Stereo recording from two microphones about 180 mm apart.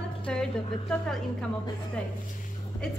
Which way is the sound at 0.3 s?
5° left (ahead or behind).